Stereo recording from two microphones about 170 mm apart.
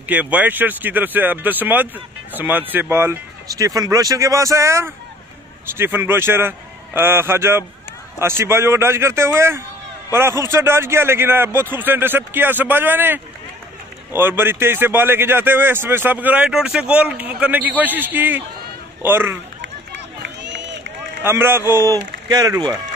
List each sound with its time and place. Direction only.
0.1 s a man's voice: 10° right (ahead or behind)
20.2 s run: 90° right
21.2 s a man's voice: 15° right (ahead or behind)